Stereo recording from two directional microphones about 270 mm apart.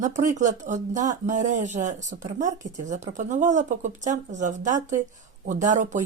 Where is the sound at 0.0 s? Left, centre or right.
Right.